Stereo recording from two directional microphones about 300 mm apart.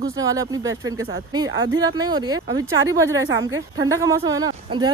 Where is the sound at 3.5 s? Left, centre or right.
Right.